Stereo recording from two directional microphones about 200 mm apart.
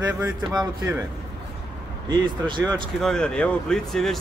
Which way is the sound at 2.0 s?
25° right (ahead or behind).